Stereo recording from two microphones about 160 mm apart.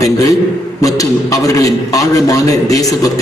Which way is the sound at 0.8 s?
20° left (ahead or behind).